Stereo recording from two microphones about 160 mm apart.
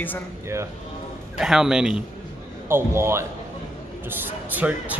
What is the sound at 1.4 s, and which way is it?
Speech, 5° right (ahead or behind).